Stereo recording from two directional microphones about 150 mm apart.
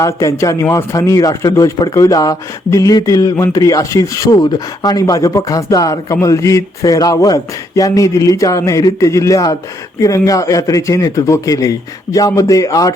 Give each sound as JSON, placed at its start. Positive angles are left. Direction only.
{"t": 0.0, "sound": "a man's voice", "side_deg": 20}